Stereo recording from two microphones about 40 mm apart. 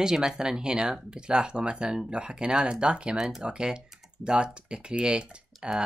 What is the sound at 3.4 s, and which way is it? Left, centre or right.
Speech, right.